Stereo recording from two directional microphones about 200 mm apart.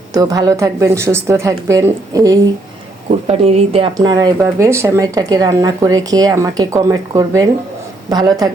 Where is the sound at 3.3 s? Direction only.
30° right (ahead or behind).